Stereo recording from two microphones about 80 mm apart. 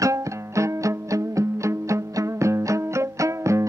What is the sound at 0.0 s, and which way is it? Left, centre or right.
Music, right.